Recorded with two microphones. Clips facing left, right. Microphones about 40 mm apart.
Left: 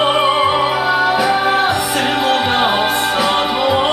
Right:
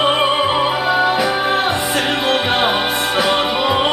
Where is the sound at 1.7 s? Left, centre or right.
Centre.